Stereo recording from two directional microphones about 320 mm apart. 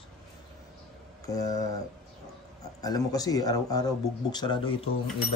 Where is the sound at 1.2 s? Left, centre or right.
Centre.